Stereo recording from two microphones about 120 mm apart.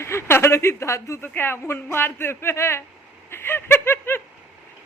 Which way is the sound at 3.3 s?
20° left (ahead or behind).